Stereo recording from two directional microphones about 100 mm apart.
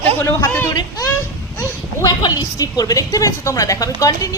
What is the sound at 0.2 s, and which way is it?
Speech, 20° left (ahead or behind).